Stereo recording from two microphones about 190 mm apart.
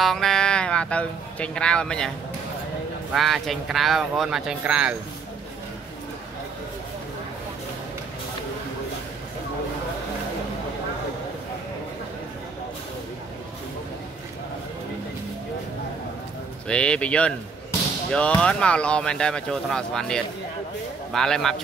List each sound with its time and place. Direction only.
0.0 s speech: centre (ahead or behind)
16.6 s speech: 5° left (ahead or behind)